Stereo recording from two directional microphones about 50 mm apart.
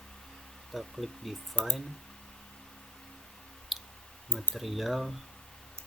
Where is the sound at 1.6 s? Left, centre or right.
Left.